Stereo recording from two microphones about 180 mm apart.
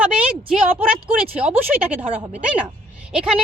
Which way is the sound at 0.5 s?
5° right (ahead or behind).